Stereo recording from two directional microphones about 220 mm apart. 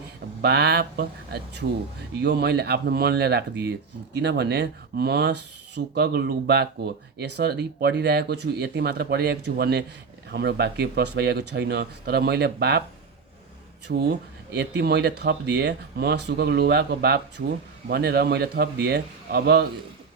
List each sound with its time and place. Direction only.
0.4 s speech: 50° right (ahead or behind)
13.9 s speech: 50° right (ahead or behind)